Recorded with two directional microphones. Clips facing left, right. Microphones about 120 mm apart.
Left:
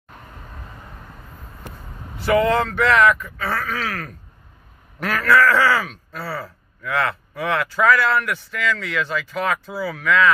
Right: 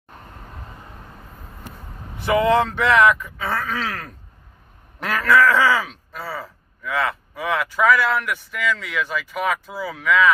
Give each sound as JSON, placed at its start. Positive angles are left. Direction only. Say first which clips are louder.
{"t": 2.1, "sound": "speech", "louder": "even", "side_deg": -20}
{"t": 5.0, "sound": "speech", "louder": "even", "side_deg": -15}